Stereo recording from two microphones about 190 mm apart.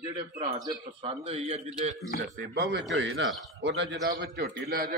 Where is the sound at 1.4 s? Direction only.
35° right (ahead or behind).